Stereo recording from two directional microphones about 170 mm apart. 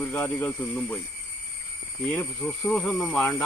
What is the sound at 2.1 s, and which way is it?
Speech, 5° left (ahead or behind).